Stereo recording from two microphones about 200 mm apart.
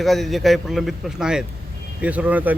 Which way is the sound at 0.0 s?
Centre (ahead or behind).